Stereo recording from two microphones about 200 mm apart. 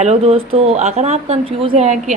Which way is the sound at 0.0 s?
30° right (ahead or behind).